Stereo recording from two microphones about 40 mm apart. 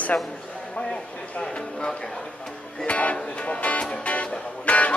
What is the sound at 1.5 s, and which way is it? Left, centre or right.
Speech, left.